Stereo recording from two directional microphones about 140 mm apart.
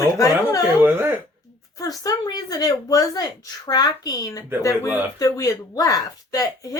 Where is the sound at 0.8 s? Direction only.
15° right (ahead or behind).